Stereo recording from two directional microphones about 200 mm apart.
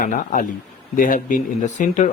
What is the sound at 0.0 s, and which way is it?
Speech, 40° left (ahead or behind).